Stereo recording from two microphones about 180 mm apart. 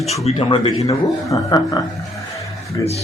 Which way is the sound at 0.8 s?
20° left (ahead or behind).